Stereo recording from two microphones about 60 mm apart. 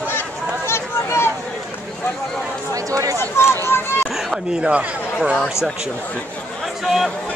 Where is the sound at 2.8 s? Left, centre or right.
Right.